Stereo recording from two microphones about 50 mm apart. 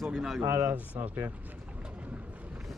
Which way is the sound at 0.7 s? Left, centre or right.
Right.